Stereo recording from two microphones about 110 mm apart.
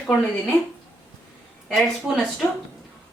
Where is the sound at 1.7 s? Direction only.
Centre (ahead or behind).